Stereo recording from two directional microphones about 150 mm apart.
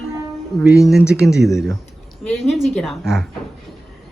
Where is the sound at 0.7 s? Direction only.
Centre (ahead or behind).